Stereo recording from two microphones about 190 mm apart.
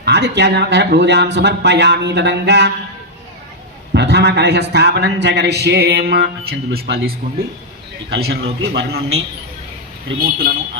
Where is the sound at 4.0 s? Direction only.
60° right (ahead or behind); by 10.2 s 80° right.